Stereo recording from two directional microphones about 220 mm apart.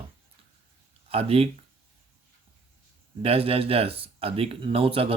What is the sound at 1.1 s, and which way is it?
Speech, 25° right (ahead or behind).